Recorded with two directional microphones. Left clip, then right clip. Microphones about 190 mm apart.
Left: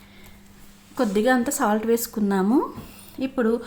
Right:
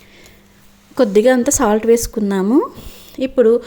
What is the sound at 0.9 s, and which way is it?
Speech, 40° right (ahead or behind).